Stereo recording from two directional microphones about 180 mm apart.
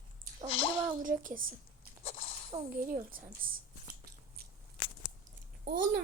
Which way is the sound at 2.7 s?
50° right (ahead or behind).